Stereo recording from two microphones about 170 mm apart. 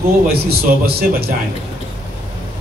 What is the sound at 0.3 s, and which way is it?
A man's voice, 65° right (ahead or behind).